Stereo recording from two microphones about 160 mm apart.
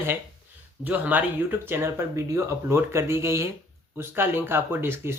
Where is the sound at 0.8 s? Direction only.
10° right (ahead or behind).